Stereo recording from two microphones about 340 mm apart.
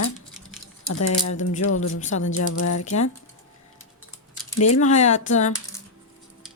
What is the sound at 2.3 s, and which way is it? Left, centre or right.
Speech, left.